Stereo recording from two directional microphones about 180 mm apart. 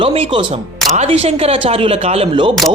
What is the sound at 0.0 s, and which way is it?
A woman's voice, 30° right (ahead or behind).